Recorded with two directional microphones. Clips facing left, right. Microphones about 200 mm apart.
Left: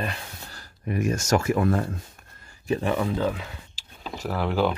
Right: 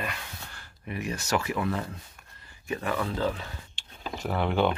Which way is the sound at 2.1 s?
45° left (ahead or behind).